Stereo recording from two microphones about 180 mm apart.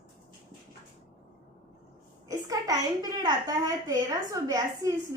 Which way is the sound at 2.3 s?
20° right (ahead or behind).